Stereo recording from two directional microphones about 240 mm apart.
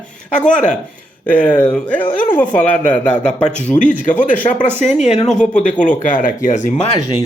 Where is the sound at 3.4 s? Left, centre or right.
Left.